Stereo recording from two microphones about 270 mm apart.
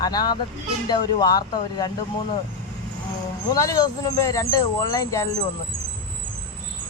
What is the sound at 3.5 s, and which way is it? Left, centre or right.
Speech, centre.